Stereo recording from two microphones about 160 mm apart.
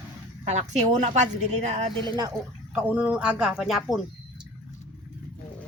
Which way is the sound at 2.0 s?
30° right (ahead or behind).